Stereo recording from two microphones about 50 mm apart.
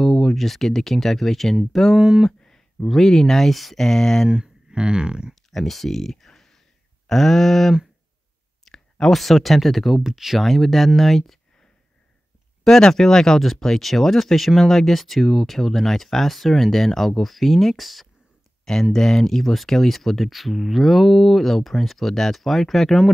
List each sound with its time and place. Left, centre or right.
0.0 s speech: centre
2.0 s speech: centre
2.4 s a sound: centre
2.9 s speech: centre
4.3 s speech: centre
5.3 s speech: centre
8.7 s a sound: centre
9.0 s speech: centre
12.6 s speech: centre